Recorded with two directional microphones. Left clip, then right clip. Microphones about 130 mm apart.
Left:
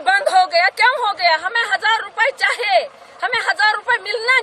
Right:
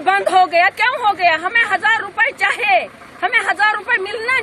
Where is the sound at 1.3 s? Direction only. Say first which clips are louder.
Right 2 dB; 85° left.